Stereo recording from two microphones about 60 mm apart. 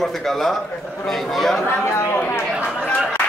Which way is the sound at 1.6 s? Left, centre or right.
Left.